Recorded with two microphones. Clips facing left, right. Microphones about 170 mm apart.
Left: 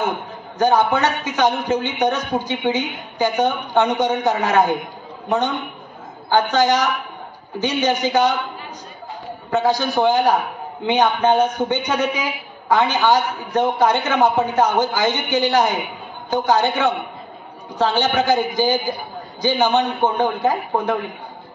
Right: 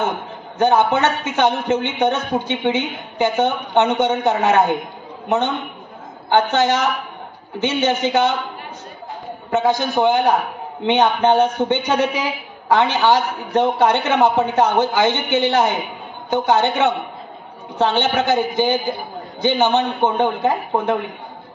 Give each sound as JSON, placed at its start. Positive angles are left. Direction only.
{"t": 0.6, "sound": "a woman's voice", "side_deg": -25}
{"t": 6.3, "sound": "a woman's voice", "side_deg": -25}
{"t": 9.5, "sound": "a woman's voice", "side_deg": -20}